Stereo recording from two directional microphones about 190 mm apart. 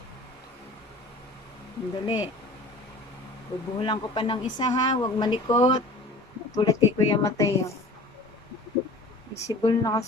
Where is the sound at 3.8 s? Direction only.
25° left (ahead or behind).